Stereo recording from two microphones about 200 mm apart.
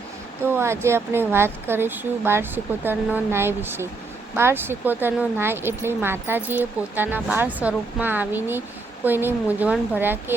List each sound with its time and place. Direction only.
0.4 s speech: 10° right (ahead or behind)